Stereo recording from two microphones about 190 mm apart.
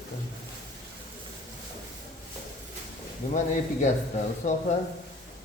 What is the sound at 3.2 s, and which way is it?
Speech, 40° left (ahead or behind).